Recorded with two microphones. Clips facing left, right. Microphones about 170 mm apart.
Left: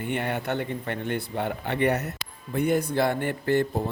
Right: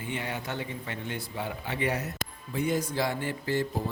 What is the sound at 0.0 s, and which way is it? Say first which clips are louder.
Speech: left 6 dB; 60° left (ahead or behind).